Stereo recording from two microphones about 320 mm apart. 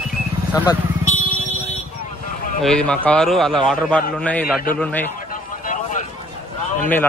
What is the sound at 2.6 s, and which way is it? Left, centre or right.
Speech, centre.